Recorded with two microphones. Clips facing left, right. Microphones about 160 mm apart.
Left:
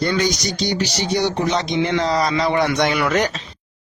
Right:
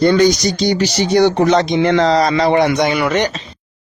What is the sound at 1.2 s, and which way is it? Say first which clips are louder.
Speech: right 8 dB; 60° right (ahead or behind).